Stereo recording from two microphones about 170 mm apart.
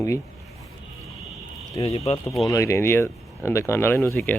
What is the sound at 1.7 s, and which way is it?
Speech, 35° left (ahead or behind).